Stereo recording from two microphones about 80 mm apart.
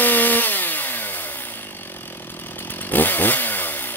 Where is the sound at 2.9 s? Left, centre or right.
Left.